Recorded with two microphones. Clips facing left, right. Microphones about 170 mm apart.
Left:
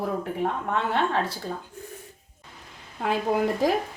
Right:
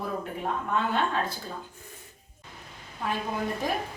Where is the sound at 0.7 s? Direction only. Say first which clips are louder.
Left 1 dB; 75° left (ahead or behind).